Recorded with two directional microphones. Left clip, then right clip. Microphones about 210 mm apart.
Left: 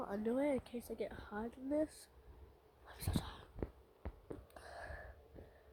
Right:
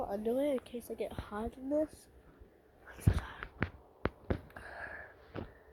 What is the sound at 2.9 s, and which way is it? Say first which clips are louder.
Whispering: right 5 dB; 15° left (ahead or behind).